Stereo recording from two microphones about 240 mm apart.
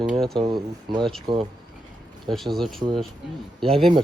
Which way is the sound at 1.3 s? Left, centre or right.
Centre.